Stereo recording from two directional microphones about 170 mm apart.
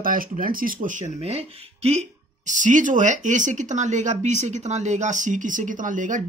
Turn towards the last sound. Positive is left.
turn(degrees=-50)  # may be behind; listen again after turning